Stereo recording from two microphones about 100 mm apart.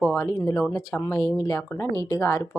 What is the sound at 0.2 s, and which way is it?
Speech, 30° left (ahead or behind).